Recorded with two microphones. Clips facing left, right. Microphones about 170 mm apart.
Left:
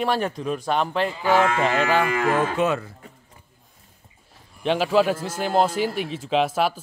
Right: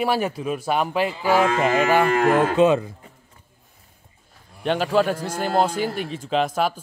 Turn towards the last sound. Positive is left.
turn(degrees=0)  # may be behind; listen again after turning